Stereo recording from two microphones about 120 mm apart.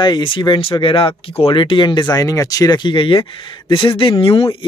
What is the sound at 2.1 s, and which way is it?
Speech, 30° left (ahead or behind).